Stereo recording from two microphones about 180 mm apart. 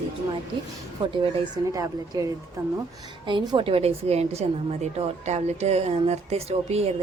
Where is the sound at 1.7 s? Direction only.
20° right (ahead or behind).